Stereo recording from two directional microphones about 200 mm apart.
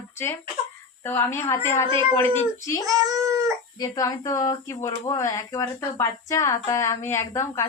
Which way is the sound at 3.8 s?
20° left (ahead or behind).